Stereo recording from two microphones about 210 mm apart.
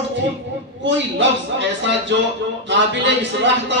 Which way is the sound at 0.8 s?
60° right (ahead or behind).